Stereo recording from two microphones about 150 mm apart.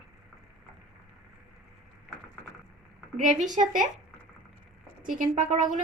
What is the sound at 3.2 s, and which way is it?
Speech, 55° right (ahead or behind).